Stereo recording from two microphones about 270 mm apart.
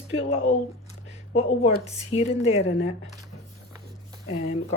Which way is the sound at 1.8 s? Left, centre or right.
Left.